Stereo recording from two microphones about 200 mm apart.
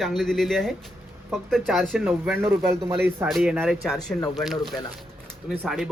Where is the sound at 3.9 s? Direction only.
20° left (ahead or behind).